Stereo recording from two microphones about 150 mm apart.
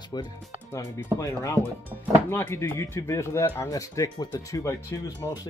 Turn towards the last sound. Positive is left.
turn(degrees=25)  # may be behind; listen again after turning